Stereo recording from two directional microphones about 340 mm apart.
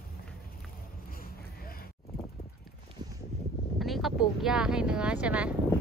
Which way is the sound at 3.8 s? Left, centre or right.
Centre.